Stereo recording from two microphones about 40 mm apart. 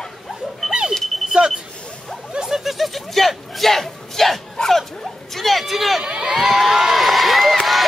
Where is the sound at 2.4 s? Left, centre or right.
Centre.